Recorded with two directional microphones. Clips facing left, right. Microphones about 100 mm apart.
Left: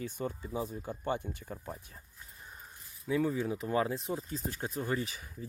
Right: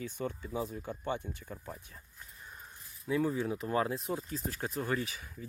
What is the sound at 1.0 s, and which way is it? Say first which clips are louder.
Speech: left 3 dB; 45° left (ahead or behind).